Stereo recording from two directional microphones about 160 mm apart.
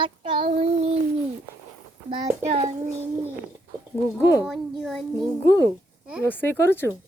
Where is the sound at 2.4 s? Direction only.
40° right (ahead or behind).